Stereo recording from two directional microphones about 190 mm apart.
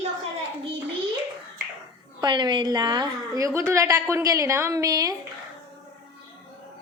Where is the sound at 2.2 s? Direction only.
25° right (ahead or behind).